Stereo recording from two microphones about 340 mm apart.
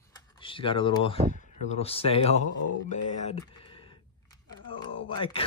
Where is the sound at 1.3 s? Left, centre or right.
Left.